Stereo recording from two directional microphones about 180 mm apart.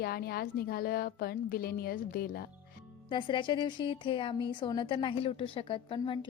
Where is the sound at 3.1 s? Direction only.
25° left (ahead or behind).